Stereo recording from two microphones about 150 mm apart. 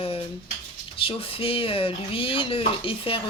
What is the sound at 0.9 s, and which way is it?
Speech, 35° left (ahead or behind).